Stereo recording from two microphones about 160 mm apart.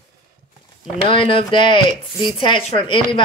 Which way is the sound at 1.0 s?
35° left (ahead or behind).